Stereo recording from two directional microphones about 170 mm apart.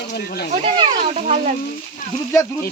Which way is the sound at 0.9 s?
45° right (ahead or behind).